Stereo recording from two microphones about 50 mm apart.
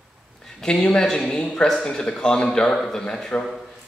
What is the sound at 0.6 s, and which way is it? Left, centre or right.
Speech, centre.